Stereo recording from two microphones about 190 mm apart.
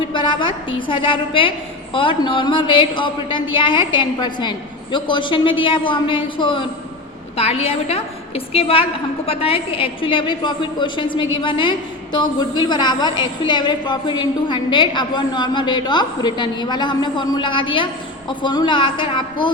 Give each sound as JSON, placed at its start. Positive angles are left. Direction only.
{"t": 0.1, "sound": "a woman's voice", "side_deg": 25}